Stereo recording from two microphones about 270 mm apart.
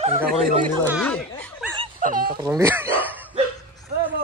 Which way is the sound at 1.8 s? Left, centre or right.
Right.